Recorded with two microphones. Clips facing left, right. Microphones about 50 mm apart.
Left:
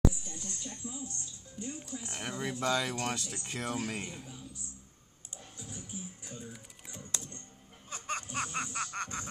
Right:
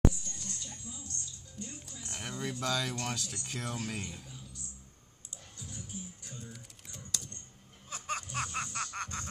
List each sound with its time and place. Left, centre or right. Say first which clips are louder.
0.1 s music: left 1 dB; centre
2.0 s speech: even; centre
5.6 s speech: left 1 dB; centre
7.1 s typing: even; left
7.9 s snicker: even; centre